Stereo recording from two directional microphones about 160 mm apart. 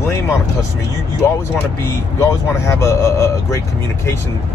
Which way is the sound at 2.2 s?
15° left (ahead or behind).